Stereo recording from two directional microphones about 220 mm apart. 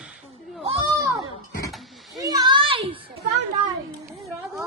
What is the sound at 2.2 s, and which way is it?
Children playing, 15° right (ahead or behind).